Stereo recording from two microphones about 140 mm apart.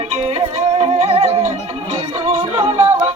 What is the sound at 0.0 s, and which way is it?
Music, 45° right (ahead or behind).